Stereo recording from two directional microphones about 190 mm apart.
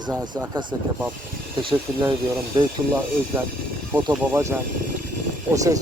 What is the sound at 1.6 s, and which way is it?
Speech, 25° right (ahead or behind).